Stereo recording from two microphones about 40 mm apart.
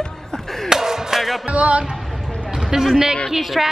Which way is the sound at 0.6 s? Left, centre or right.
Centre.